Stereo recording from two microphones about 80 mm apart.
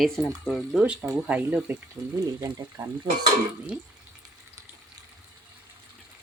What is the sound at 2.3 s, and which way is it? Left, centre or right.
Speech, right.